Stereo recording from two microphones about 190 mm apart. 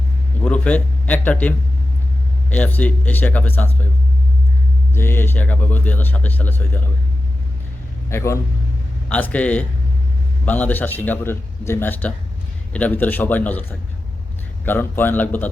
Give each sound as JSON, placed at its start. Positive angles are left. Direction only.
{"t": 0.4, "sound": "speech", "side_deg": 5}
{"t": 4.9, "sound": "speech", "side_deg": 10}
{"t": 8.1, "sound": "speech", "side_deg": 15}